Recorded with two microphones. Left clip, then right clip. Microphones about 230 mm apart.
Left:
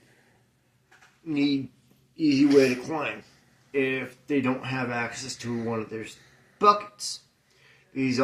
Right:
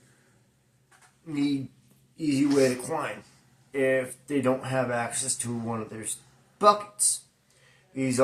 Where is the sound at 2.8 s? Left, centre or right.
Right.